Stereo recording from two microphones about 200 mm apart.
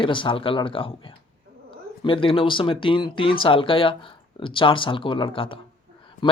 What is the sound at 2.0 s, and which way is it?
Speech, 25° left (ahead or behind).